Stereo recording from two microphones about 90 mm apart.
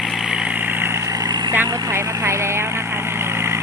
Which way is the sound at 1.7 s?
30° right (ahead or behind).